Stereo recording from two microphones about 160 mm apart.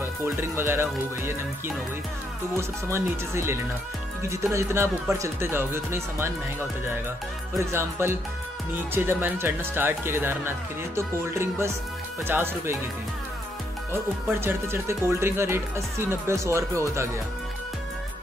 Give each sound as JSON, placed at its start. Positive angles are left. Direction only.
{"t": 0.0, "sound": "speech", "side_deg": -15}
{"t": 2.5, "sound": "speech", "side_deg": -15}
{"t": 7.5, "sound": "speech", "side_deg": -15}
{"t": 14.4, "sound": "speech", "side_deg": -15}